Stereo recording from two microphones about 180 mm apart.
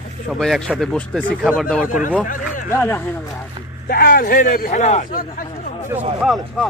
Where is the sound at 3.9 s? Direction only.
55° left (ahead or behind).